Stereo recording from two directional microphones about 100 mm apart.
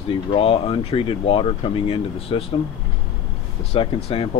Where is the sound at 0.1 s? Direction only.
70° left (ahead or behind).